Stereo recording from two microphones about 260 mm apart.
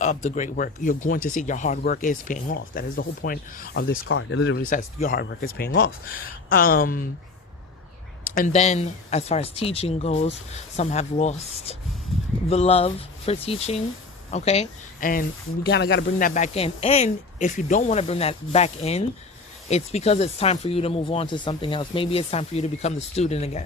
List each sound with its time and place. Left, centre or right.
0.0 s speech: left
4.1 s speech: left
4.6 s speech: left
8.4 s speech: left